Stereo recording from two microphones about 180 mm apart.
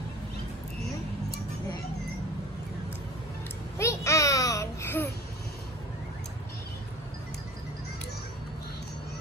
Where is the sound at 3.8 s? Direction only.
15° left (ahead or behind).